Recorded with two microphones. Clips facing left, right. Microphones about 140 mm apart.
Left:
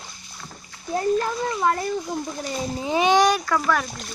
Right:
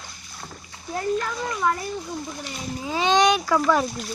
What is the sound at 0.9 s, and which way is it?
Speech, 35° left (ahead or behind).